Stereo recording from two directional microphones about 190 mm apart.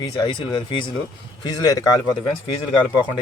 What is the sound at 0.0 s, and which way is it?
Speech, 25° left (ahead or behind).